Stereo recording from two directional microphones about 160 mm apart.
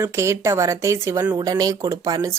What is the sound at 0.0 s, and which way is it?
Speech, 15° right (ahead or behind).